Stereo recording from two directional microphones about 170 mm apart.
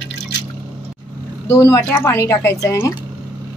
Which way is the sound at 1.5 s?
15° left (ahead or behind).